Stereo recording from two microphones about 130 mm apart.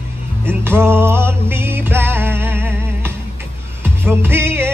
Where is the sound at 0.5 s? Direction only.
15° right (ahead or behind).